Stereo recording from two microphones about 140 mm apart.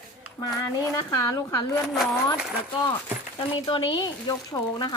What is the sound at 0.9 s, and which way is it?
Speech, 20° left (ahead or behind).